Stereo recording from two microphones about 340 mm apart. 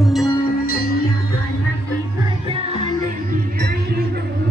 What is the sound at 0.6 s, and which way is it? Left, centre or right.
Music, left.